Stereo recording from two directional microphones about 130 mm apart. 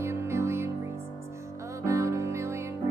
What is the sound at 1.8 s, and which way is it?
Music, 25° right (ahead or behind).